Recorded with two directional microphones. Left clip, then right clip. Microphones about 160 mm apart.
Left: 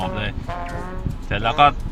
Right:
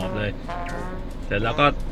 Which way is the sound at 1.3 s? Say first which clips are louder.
Left 4 dB; 10° left (ahead or behind).